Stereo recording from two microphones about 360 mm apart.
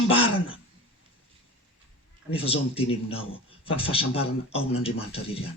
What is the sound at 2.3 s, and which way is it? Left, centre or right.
A man's voice, centre.